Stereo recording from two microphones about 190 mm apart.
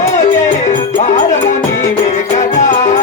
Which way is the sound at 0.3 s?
40° left (ahead or behind).